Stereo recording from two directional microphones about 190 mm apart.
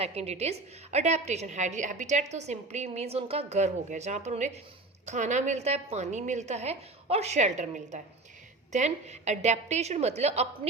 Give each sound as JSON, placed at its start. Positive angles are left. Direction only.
{"t": 0.0, "sound": "a woman's voice", "side_deg": -35}